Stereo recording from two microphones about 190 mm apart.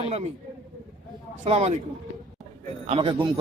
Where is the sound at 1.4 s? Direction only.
35° right (ahead or behind).